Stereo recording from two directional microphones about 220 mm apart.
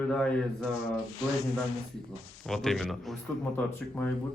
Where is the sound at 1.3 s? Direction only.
30° right (ahead or behind).